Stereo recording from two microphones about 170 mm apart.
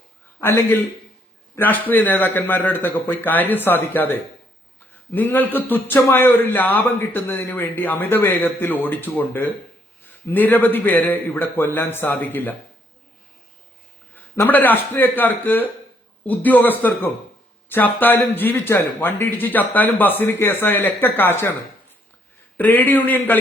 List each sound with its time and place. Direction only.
0.3 s a sound: 15° left (ahead or behind)
1.5 s a man's voice: 10° left (ahead or behind)
14.3 s a man's voice: 10° left (ahead or behind)
22.5 s a man's voice: 10° left (ahead or behind)